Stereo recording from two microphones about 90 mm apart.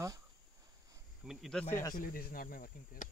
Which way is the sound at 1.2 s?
5° right (ahead or behind).